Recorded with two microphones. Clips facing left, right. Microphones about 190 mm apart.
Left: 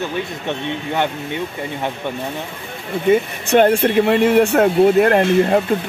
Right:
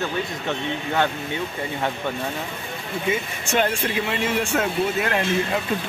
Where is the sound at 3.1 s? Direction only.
60° left (ahead or behind).